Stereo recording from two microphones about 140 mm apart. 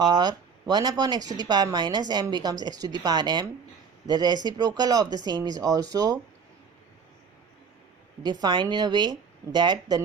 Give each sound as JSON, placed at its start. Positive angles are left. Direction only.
{"t": 0.0, "sound": "a woman's voice", "side_deg": -30}
{"t": 8.2, "sound": "speech", "side_deg": -30}